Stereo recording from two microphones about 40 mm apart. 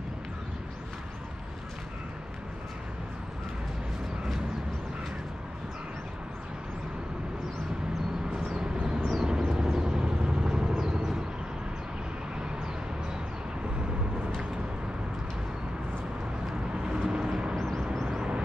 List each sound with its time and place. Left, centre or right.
8.3 s a sound: centre
9.1 s vehicle: centre
16.7 s vehicle: centre
17.6 s vehicle: centre